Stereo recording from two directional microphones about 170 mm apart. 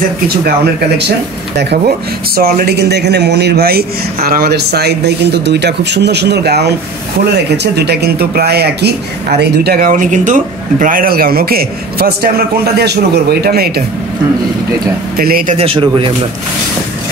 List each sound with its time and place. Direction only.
1.6 s speech: 70° right (ahead or behind)
15.1 s speech: 60° right (ahead or behind)
15.5 s speech: 35° right (ahead or behind)